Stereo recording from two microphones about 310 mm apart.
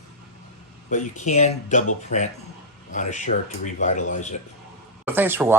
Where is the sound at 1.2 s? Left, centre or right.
Left.